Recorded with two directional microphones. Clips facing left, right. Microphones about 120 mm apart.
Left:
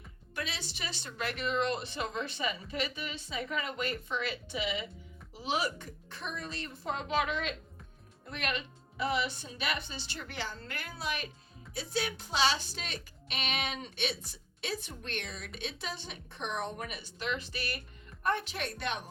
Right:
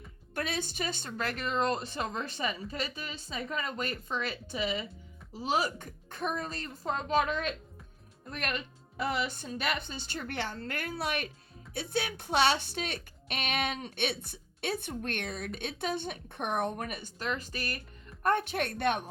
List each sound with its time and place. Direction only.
0.3 s a woman's voice: 50° right (ahead or behind)